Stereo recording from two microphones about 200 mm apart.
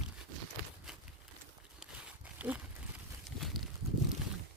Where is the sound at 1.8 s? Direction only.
5° right (ahead or behind).